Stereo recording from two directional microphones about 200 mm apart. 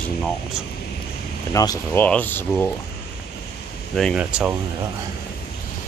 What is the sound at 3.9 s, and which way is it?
Speech, centre (ahead or behind).